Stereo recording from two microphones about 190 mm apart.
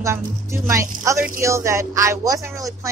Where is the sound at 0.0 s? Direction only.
15° right (ahead or behind).